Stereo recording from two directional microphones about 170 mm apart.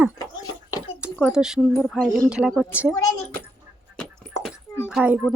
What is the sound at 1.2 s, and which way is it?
Speech, 5° right (ahead or behind).